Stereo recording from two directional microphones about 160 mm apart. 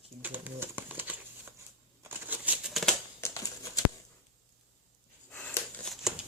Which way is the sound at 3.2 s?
20° left (ahead or behind).